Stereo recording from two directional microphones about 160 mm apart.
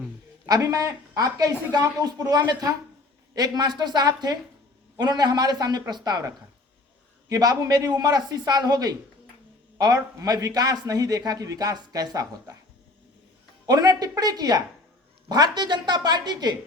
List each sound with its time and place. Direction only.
0.4 s speech: 25° right (ahead or behind)
13.7 s speech: 25° right (ahead or behind)